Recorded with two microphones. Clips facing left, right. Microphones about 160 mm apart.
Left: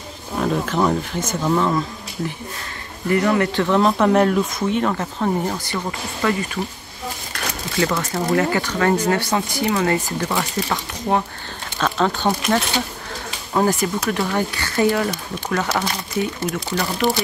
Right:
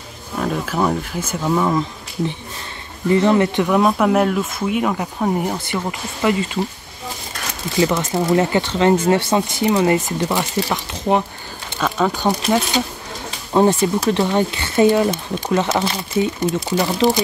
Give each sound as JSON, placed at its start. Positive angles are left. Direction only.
{"t": 0.4, "sound": "speech", "side_deg": -5}
{"t": 3.1, "sound": "speech", "side_deg": -25}
{"t": 3.6, "sound": "speech", "side_deg": -10}
{"t": 7.7, "sound": "speech", "side_deg": -20}
{"t": 13.5, "sound": "speech", "side_deg": -25}